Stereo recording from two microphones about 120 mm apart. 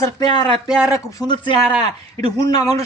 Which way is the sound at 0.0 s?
35° left (ahead or behind).